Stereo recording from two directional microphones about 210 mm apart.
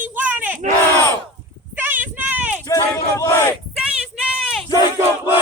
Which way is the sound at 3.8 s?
5° right (ahead or behind).